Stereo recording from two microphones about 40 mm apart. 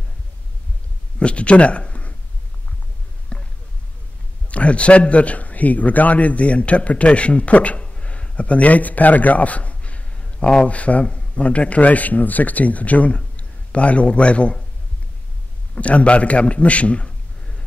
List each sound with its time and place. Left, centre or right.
1.2 s speech: left
3.3 s a sound: left
4.5 s a man's voice: left
15.7 s a man's voice: left